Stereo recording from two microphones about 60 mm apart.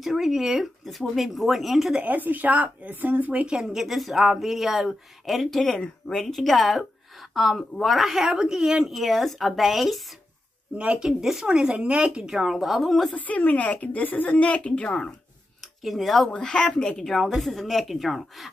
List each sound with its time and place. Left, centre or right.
0.0 s speech: centre
2.0 s speech: right
3.4 s speech: centre
10.8 s speech: right
11.1 s speech: centre
12.2 s speech: centre
13.1 s a woman's voice: left
15.6 s speech: centre
16.3 s speech: centre